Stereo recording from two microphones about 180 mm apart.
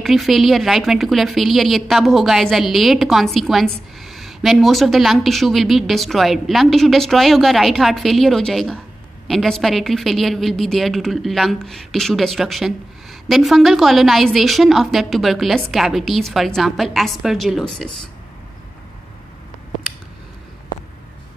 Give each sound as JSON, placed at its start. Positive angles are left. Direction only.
{"t": 0.0, "sound": "speech", "side_deg": 0}